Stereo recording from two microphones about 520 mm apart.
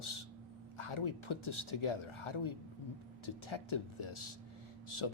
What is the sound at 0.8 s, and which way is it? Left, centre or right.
A man's voice, left.